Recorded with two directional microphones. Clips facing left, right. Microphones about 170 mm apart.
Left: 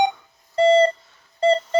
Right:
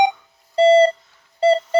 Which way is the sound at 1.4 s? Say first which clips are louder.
Right 2 dB; 10° right (ahead or behind).